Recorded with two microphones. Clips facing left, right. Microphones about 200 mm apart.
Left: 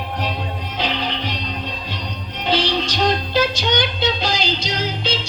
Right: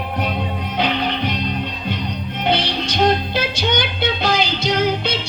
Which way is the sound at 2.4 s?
55° right (ahead or behind).